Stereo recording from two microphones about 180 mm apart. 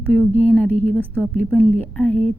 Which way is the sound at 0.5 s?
5° left (ahead or behind).